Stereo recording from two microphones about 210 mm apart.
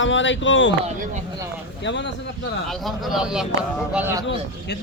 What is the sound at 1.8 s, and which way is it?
Speech, 60° left (ahead or behind).